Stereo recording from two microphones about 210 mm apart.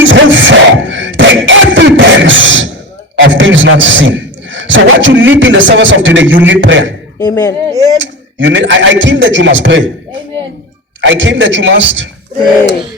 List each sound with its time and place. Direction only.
0.0 s beatboxing: 65° right (ahead or behind)
3.2 s a man's voice: 60° right (ahead or behind)
7.2 s speech: 15° left (ahead or behind)
7.9 s speech: 60° right (ahead or behind)
11.0 s speech: 60° right (ahead or behind)